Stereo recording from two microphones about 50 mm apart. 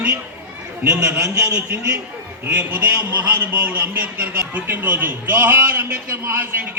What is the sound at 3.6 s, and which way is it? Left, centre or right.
Speech, right.